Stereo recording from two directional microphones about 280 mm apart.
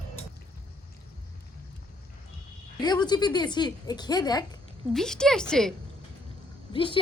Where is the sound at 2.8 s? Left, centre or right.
Centre.